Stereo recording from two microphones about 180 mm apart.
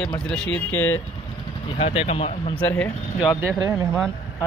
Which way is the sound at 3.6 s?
15° right (ahead or behind).